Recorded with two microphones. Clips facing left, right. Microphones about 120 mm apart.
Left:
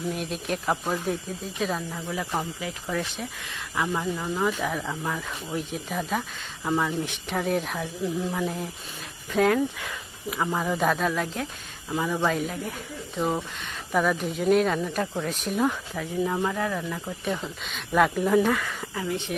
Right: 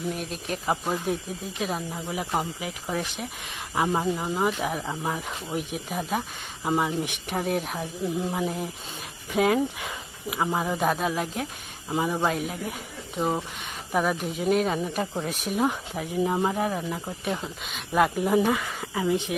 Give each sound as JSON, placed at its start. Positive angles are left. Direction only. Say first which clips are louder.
{"t": 0.1, "sound": "speech", "louder": "left 2 dB", "side_deg": 0}
{"t": 0.6, "sound": "speech", "louder": "right 2 dB", "side_deg": -10}
{"t": 3.8, "sound": "speech", "louder": "right 3 dB", "side_deg": -25}
{"t": 7.8, "sound": "speech", "louder": "even", "side_deg": -20}
{"t": 11.9, "sound": "speech", "louder": "even", "side_deg": -20}
{"t": 12.3, "sound": "speech", "louder": "left 1 dB", "side_deg": -5}
{"t": 15.1, "sound": "speech", "louder": "even", "side_deg": -15}
{"t": 17.2, "sound": "speech", "louder": "left 1 dB", "side_deg": -5}
{"t": 18.3, "sound": "speech", "louder": "left 1 dB", "side_deg": -15}